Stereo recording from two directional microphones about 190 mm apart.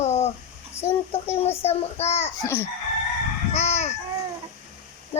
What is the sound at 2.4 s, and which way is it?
Chicken, 10° left (ahead or behind).